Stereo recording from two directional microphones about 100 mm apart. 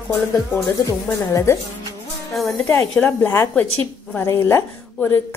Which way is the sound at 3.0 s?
20° left (ahead or behind).